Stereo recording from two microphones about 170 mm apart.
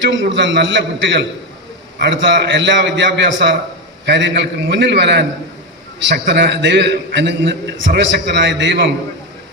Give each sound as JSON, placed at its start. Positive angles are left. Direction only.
{"t": 0.0, "sound": "a man's voice", "side_deg": -90}